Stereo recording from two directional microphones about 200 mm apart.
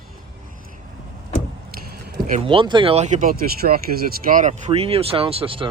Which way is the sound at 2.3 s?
30° right (ahead or behind).